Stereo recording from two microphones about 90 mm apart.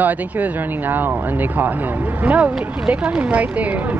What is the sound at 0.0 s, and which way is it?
Speech, 20° right (ahead or behind).